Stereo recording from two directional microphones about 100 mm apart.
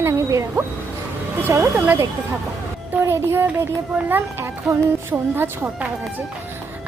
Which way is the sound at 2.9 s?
25° right (ahead or behind).